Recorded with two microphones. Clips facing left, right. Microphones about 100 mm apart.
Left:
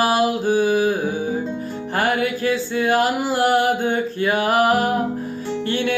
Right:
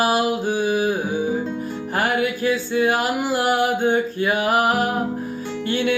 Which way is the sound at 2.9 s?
40° left (ahead or behind).